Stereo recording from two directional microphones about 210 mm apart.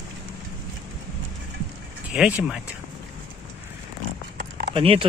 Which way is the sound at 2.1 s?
5° right (ahead or behind).